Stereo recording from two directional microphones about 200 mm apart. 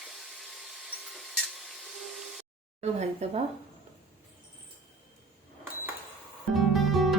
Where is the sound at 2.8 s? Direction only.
35° right (ahead or behind).